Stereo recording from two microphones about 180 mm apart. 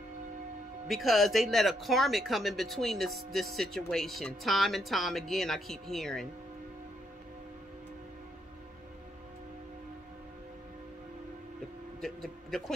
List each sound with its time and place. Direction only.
0.8 s speech: centre (ahead or behind)
12.0 s speech: centre (ahead or behind)